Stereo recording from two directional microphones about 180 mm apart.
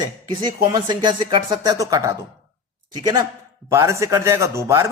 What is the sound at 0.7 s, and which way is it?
A man's voice, 25° right (ahead or behind).